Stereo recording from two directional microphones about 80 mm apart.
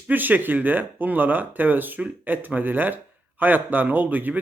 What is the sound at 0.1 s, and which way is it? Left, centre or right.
Speech, right.